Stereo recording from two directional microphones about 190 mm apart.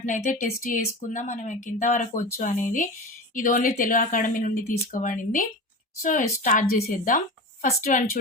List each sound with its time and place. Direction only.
0.0 s a woman's voice: 40° left (ahead or behind)